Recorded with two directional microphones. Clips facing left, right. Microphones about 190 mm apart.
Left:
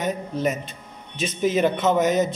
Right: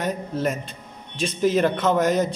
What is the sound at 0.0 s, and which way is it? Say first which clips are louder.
A man's voice: left 1 dB; centre (ahead or behind).